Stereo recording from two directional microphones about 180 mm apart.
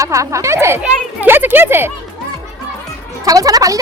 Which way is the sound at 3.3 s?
20° right (ahead or behind).